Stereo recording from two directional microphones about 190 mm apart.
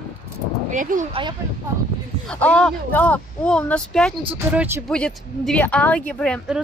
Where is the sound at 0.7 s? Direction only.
40° right (ahead or behind).